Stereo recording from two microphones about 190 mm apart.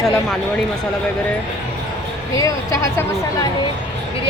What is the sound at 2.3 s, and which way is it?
Speech, 15° left (ahead or behind).